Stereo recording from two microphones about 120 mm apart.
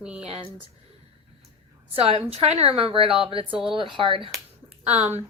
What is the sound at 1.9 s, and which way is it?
A woman's voice, 55° right (ahead or behind).